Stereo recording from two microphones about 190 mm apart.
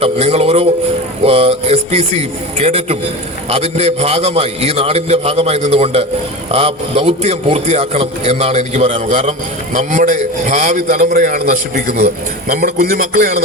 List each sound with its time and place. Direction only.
0.0 s a man's voice: 30° right (ahead or behind)
1.2 s a sound: 30° right (ahead or behind)
3.5 s a man's voice: 35° right (ahead or behind)